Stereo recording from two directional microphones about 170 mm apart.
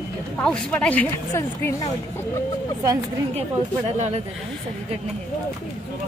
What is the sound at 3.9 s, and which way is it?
Speech, 45° right (ahead or behind).